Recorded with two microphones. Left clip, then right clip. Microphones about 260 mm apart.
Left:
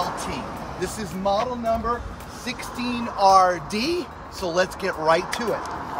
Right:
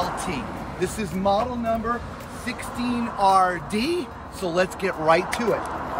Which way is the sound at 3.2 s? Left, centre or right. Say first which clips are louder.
Left 3 dB; left.